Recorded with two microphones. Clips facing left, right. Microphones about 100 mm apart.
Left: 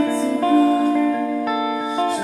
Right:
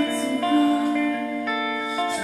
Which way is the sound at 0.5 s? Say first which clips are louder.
Left 3 dB; 5° left (ahead or behind).